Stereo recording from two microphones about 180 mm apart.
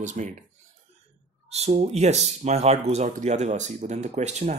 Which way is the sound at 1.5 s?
35° right (ahead or behind).